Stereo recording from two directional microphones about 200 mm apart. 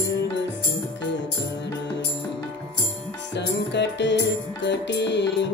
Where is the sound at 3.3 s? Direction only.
60° left (ahead or behind).